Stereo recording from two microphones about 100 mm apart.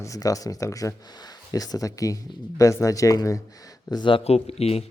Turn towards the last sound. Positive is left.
turn(degrees=90)